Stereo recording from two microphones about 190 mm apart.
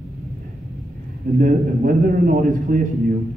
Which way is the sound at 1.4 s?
45° right (ahead or behind).